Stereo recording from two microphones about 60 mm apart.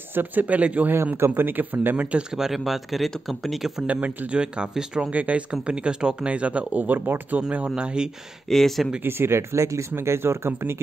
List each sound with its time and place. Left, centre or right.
0.1 s speech: right
1.1 s speech: right
2.3 s speech: centre
3.8 s speech: right
5.1 s speech: right
8.5 s speech: centre
9.0 s speech: right